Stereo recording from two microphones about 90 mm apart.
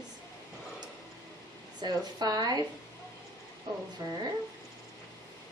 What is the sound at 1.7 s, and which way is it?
Speech, 50° right (ahead or behind).